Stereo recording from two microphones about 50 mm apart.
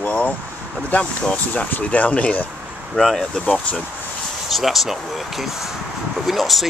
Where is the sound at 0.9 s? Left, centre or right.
Left.